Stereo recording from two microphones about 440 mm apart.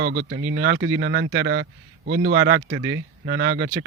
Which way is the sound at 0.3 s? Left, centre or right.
Right.